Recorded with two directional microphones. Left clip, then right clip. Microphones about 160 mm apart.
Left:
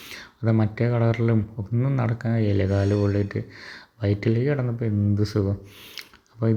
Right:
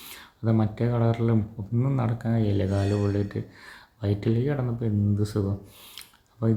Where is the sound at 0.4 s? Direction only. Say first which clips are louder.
Left 2 dB; 15° left (ahead or behind).